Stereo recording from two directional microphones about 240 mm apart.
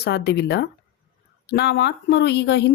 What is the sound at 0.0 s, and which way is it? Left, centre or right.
Speech, left.